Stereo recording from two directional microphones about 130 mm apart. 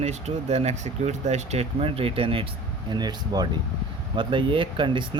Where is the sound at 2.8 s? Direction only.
30° right (ahead or behind).